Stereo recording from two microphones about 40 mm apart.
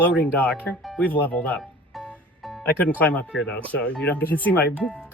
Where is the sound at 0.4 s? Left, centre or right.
Left.